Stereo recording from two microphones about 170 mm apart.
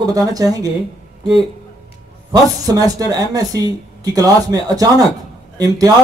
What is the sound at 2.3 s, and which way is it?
Speech, 20° right (ahead or behind).